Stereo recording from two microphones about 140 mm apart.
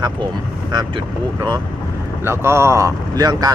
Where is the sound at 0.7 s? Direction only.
30° right (ahead or behind).